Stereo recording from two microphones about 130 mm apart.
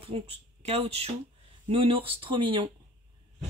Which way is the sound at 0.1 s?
50° right (ahead or behind).